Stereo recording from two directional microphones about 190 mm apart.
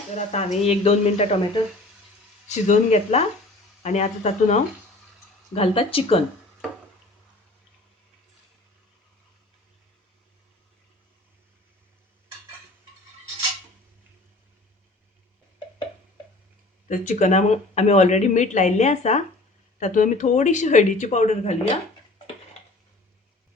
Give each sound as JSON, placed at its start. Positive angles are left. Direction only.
{"t": 0.3, "sound": "speech", "side_deg": 35}
{"t": 16.9, "sound": "speech", "side_deg": 40}